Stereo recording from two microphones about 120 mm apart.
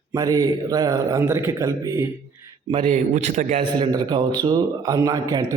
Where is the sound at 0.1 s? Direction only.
30° right (ahead or behind).